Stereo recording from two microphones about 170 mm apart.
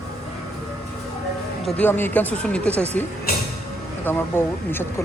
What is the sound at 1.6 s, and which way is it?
Speech, 10° left (ahead or behind).